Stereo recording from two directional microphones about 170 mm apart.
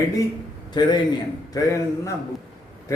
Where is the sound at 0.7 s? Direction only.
25° left (ahead or behind).